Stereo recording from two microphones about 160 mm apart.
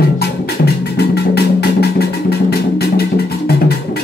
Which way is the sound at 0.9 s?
90° left.